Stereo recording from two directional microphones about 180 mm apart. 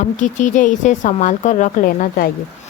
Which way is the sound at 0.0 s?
45° left (ahead or behind).